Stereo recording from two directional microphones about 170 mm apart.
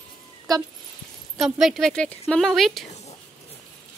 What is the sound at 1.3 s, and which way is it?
A woman's voice, centre (ahead or behind).